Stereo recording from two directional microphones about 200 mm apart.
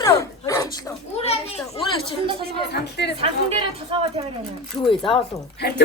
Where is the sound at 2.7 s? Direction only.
55° left (ahead or behind).